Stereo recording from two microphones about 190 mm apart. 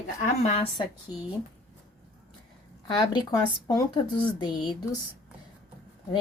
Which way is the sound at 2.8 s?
20° left (ahead or behind).